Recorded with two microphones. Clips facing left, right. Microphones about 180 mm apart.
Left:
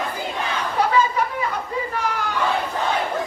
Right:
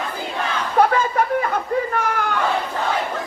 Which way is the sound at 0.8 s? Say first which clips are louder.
Right 3 dB; 55° right (ahead or behind).